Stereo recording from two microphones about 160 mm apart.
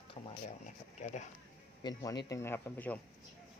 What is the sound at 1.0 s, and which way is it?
Speech, 50° left (ahead or behind).